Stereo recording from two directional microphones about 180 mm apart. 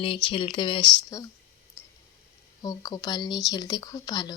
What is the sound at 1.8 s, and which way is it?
Clicking, 15° left (ahead or behind).